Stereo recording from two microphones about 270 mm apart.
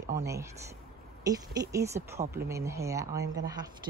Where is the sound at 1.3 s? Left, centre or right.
Centre.